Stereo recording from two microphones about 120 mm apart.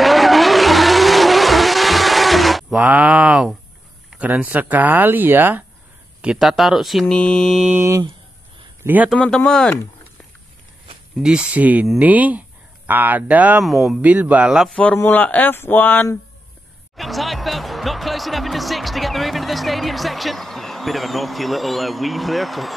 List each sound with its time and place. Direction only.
0.0 s vehicle: centre (ahead or behind)
2.8 s speech: 10° right (ahead or behind)
6.2 s speech: centre (ahead or behind)
7.7 s a man's voice: 20° right (ahead or behind)
9.1 s speech: 5° left (ahead or behind)
11.2 s speech: 10° right (ahead or behind)
13.7 s speech: centre (ahead or behind)
14.0 s speech: 15° right (ahead or behind)
14.8 s speech: 15° left (ahead or behind)
16.9 s speech: centre (ahead or behind)